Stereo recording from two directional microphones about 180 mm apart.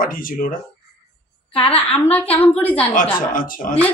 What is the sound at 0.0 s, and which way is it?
Speech, 50° left (ahead or behind).